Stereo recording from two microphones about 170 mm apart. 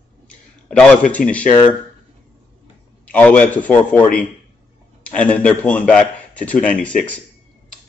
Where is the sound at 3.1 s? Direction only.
10° left (ahead or behind).